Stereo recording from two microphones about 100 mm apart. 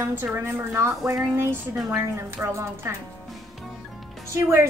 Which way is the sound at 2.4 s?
30° right (ahead or behind).